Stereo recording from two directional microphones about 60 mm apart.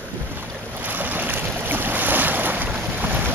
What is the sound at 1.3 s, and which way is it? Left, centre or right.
Boat, right.